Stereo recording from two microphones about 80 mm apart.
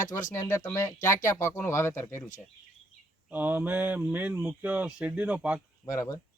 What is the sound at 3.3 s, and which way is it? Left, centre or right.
Mantra, right.